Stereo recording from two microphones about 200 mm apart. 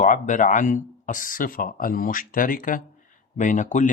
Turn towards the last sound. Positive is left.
turn(degrees=40)  # may be behind; listen again after turning